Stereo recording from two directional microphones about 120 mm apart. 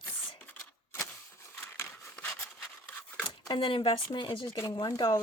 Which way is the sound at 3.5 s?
45° left (ahead or behind).